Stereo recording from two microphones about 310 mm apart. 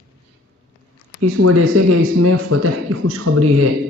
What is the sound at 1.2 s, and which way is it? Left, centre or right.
Speech, right.